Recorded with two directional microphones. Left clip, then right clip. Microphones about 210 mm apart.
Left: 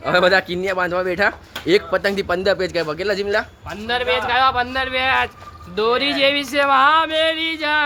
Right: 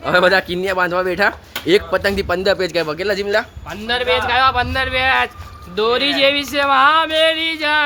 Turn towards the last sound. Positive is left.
turn(degrees=-5)  # may be behind; listen again after turning